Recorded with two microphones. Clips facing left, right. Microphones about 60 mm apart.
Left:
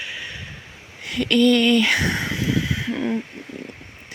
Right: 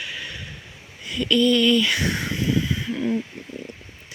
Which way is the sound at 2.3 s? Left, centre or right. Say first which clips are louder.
Even; left.